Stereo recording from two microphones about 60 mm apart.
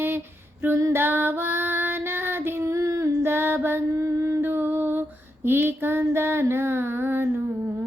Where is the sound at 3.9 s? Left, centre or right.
Right.